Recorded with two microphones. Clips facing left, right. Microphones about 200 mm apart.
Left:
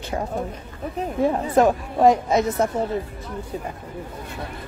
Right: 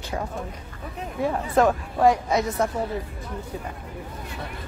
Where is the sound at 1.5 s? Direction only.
20° left (ahead or behind).